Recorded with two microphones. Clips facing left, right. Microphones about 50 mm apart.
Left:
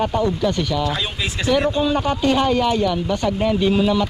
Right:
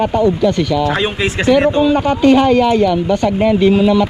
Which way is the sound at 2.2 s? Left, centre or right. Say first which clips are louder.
Right 8 dB; centre.